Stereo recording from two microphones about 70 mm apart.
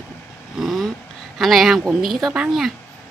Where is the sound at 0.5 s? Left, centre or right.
Centre.